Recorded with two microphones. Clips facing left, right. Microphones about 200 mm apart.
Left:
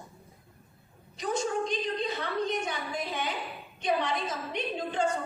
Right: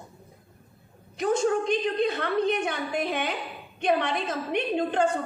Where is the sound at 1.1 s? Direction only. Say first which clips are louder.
Right 6 dB; 55° right (ahead or behind).